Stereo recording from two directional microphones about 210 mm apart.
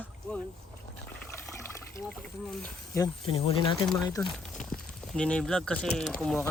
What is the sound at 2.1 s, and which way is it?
Speech, 5° left (ahead or behind).